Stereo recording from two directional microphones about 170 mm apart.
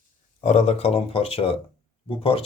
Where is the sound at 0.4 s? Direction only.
40° left (ahead or behind).